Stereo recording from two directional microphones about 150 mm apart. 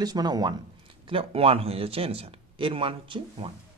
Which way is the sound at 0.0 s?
25° right (ahead or behind).